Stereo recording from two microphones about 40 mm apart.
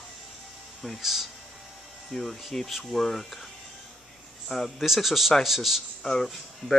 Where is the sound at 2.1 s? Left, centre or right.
Centre.